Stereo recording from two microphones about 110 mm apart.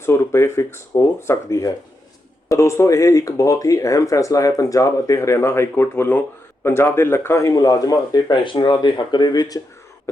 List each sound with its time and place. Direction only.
0.0 s speech: 25° left (ahead or behind)